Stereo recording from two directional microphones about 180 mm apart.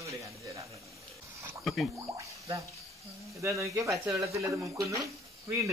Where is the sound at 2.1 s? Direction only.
15° right (ahead or behind).